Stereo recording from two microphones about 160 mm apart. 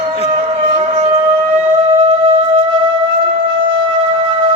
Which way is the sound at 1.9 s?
35° right (ahead or behind).